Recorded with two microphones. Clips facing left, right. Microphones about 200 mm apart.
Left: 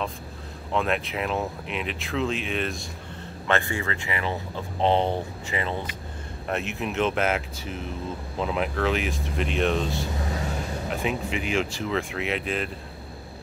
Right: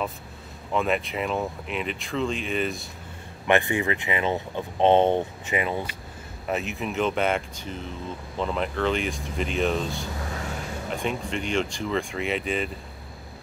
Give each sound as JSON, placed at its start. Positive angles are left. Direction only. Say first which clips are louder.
{"t": 0.7, "sound": "speech", "louder": "right 1 dB", "side_deg": 0}
{"t": 3.4, "sound": "speech", "louder": "right 4 dB", "side_deg": -15}
{"t": 6.5, "sound": "speech", "louder": "even", "side_deg": 0}